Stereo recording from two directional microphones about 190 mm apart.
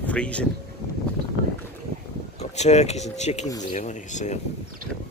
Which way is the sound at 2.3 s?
35° left (ahead or behind).